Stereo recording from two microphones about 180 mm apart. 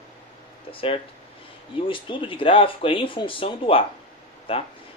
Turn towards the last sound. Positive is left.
turn(degrees=30)  # may be behind; listen again after turning